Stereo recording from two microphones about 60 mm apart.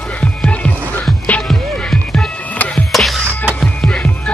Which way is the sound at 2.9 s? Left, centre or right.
Centre.